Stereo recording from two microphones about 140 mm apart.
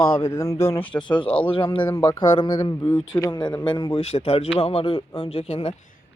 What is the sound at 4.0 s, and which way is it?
Speech, 50° left (ahead or behind).